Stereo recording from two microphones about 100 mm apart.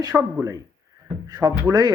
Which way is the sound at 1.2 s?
40° right (ahead or behind).